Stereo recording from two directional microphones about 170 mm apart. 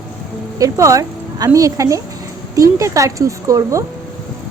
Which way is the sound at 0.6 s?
20° right (ahead or behind).